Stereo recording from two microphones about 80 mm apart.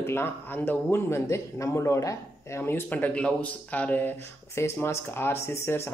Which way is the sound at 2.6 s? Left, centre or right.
Left.